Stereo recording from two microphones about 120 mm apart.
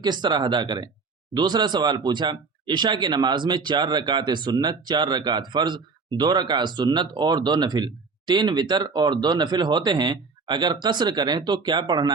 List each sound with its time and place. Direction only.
0.0 s speech: 40° right (ahead or behind)